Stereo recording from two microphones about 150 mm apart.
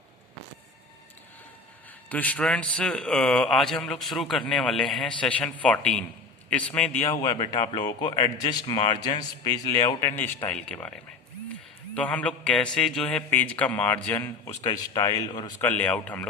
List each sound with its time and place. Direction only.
2.0 s a man's voice: 10° left (ahead or behind)
7.1 s a man's voice: 25° left (ahead or behind)
14.6 s a man's voice: 25° left (ahead or behind)
15.6 s a man's voice: 10° left (ahead or behind)